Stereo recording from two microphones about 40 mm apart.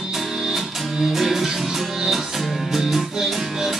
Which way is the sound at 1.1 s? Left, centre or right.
Centre.